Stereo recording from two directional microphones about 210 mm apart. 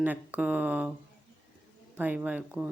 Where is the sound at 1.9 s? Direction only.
5° right (ahead or behind).